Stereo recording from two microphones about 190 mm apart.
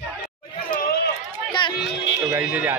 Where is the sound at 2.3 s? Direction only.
10° right (ahead or behind).